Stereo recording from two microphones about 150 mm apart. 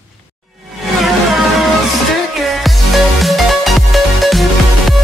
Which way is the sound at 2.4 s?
Centre (ahead or behind).